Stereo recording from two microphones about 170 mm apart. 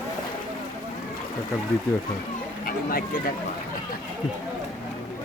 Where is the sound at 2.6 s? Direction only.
60° left (ahead or behind).